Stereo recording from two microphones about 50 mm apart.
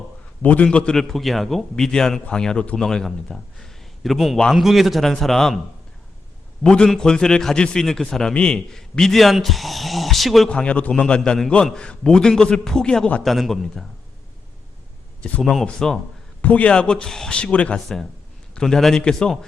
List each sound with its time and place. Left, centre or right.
0.4 s a man's voice: left
0.9 s a man's voice: centre
6.6 s a man's voice: centre
8.3 s speech: centre
10.5 s a man's voice: left
13.2 s speech: centre
15.2 s a man's voice: centre
16.4 s a man's voice: left
16.7 s a man's voice: centre
17.3 s a man's voice: left
17.7 s a man's voice: centre